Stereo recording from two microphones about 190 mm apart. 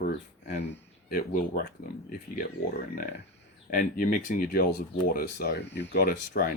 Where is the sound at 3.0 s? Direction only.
45° left (ahead or behind).